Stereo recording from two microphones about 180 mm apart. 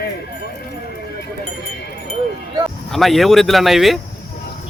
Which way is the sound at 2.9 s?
Centre (ahead or behind).